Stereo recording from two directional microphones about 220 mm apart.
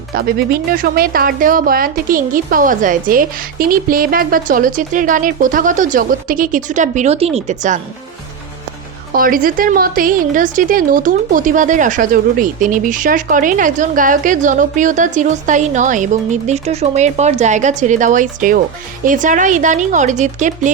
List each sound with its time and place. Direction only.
0.1 s a woman's voice: 40° right (ahead or behind)
9.1 s a woman's voice: 40° right (ahead or behind)